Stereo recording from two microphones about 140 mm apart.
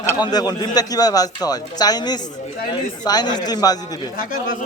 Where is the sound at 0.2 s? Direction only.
30° left (ahead or behind).